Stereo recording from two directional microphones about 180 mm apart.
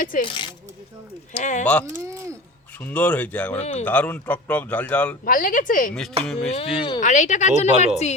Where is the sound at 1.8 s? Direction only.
15° right (ahead or behind).